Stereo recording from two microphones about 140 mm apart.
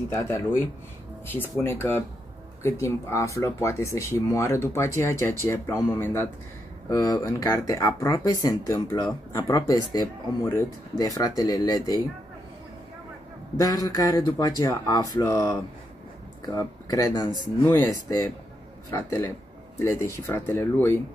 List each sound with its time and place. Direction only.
0.1 s speech: 20° left (ahead or behind)
6.9 s speech: 25° left (ahead or behind)
13.6 s speech: 25° left (ahead or behind)
16.5 s speech: 25° left (ahead or behind)